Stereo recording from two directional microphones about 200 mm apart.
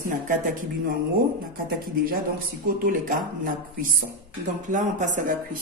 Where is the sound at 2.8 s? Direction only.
45° right (ahead or behind).